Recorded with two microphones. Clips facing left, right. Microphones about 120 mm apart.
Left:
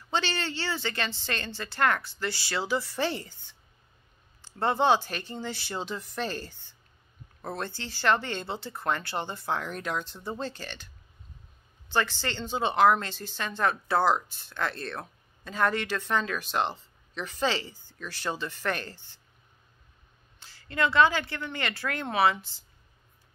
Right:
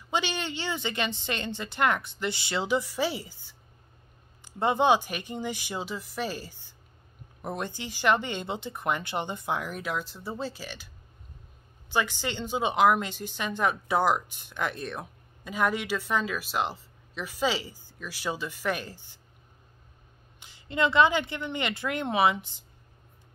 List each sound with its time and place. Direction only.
0.1 s speech: 15° right (ahead or behind)
11.9 s speech: 10° right (ahead or behind)
20.3 s a woman's voice: 20° right (ahead or behind)